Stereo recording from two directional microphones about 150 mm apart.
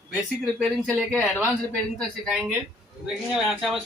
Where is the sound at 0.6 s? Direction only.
5° left (ahead or behind).